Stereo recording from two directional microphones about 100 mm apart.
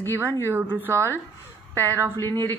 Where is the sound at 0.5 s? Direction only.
20° right (ahead or behind).